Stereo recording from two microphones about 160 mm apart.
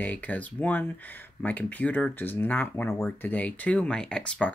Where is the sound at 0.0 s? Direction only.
10° left (ahead or behind).